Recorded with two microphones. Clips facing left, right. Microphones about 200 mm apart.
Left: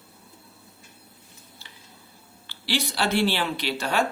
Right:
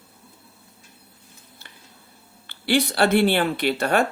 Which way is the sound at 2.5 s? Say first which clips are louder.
Right 7 dB; 55° right (ahead or behind).